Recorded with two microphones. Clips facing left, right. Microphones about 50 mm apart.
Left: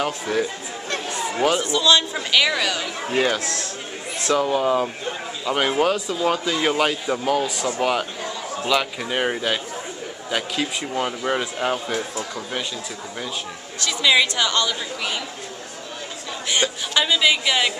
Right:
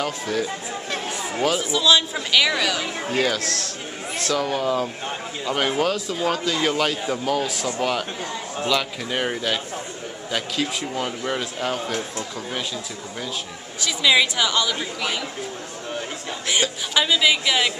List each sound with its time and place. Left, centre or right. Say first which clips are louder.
0.0 s a man's voice: left 2 dB; centre
1.6 s a woman's voice: left 1 dB; centre
3.1 s a man's voice: left 2 dB; centre
13.8 s a woman's voice: even; centre
16.9 s a woman's voice: even; centre